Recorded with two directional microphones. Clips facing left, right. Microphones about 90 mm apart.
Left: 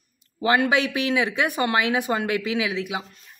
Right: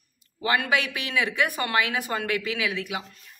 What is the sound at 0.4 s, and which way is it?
Speech, 25° left (ahead or behind).